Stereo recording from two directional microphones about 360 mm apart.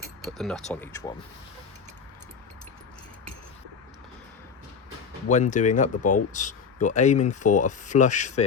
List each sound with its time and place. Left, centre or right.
0.3 s speech: centre
5.3 s speech: centre
6.0 s speech: left
6.3 s speech: centre